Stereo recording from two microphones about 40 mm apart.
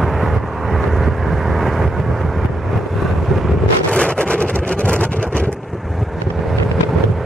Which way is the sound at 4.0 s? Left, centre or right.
Left.